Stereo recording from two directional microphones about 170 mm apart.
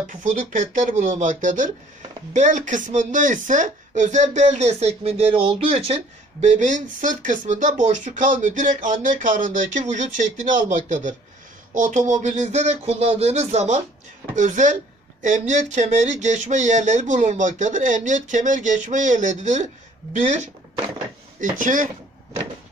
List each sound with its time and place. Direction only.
0.0 s speech: 50° right (ahead or behind)
6.4 s speech: 45° right (ahead or behind)